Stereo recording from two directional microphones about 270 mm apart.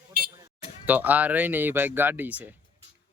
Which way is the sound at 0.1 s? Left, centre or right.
Right.